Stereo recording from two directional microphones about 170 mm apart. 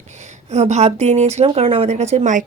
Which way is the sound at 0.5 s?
40° right (ahead or behind).